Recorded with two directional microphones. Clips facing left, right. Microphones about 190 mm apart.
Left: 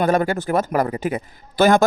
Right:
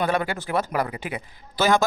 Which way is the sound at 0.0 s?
45° left (ahead or behind).